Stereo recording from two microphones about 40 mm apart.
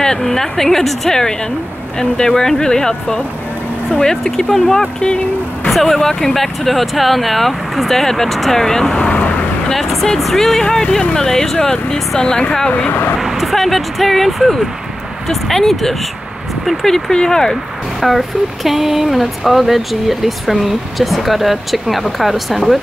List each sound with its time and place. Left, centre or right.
0.0 s a woman's voice: centre
5.7 s speech: centre
5.9 s speech: centre
6.3 s speech: centre
8.9 s vehicle: left
9.2 s vehicle: left
9.7 s speech: centre
10.6 s a woman's voice: centre
12.6 s speech: left
13.2 s speech: centre
16.8 s a woman's voice: centre
18.0 s speech: centre